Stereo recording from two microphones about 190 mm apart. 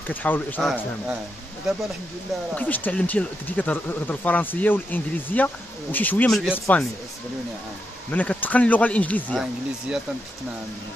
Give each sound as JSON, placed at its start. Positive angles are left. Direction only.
{"t": 0.0, "sound": "speech", "side_deg": 10}
{"t": 2.5, "sound": "speech", "side_deg": 10}
{"t": 8.1, "sound": "speech", "side_deg": 10}